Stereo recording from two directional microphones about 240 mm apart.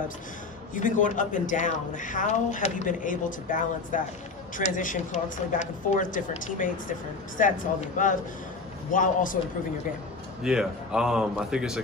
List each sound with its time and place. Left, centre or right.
0.7 s a woman's voice: left
10.4 s a man's voice: centre